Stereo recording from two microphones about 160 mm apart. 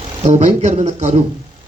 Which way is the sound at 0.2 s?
45° right (ahead or behind).